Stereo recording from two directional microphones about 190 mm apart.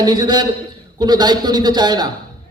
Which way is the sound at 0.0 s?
20° right (ahead or behind).